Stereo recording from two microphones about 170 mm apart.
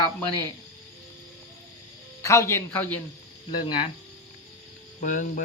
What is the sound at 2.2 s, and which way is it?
Speech, 15° left (ahead or behind).